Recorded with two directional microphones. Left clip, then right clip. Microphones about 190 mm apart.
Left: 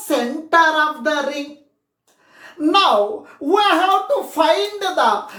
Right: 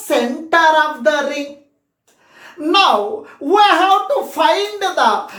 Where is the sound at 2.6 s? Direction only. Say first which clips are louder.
Right 1 dB; 5° left (ahead or behind).